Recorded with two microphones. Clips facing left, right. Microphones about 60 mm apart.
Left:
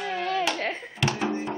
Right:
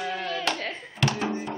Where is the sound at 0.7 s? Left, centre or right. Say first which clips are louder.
Right 1 dB; centre.